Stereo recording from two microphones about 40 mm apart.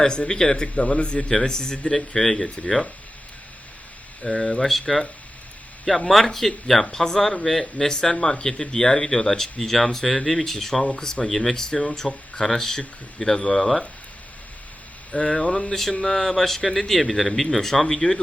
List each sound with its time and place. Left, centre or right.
0.0 s speech: centre
0.8 s speech: left
1.3 s speech: centre
4.2 s speech: centre
6.1 s speech: centre
15.1 s speech: centre